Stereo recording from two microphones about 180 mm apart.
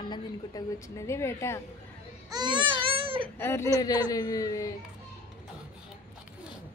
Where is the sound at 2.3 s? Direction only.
25° right (ahead or behind).